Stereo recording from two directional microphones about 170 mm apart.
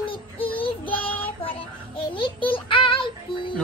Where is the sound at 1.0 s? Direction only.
10° left (ahead or behind).